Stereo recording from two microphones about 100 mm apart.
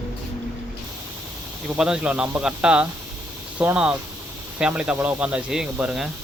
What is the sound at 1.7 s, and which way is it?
Speech, 10° right (ahead or behind).